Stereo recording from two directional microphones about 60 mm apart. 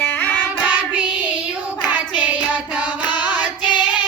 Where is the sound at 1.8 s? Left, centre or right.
Right.